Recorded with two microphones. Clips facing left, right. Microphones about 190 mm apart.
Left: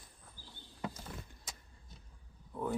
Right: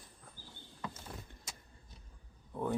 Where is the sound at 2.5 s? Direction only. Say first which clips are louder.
Right 1 dB; 20° right (ahead or behind).